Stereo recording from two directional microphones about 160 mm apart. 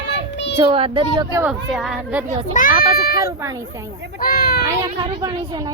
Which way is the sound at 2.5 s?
60° left (ahead or behind).